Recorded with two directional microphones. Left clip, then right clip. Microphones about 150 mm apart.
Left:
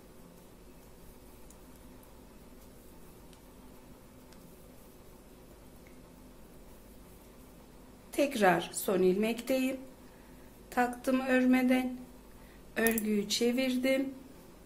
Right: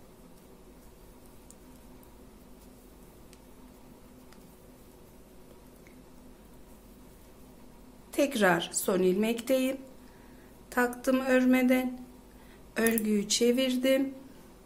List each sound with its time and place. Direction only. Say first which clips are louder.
8.1 s a woman's voice: right 1 dB; 20° right (ahead or behind)